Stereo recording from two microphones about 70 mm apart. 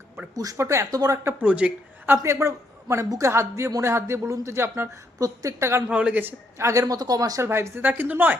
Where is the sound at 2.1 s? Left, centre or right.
Right.